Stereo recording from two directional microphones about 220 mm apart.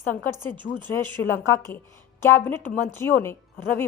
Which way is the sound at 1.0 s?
10° left (ahead or behind).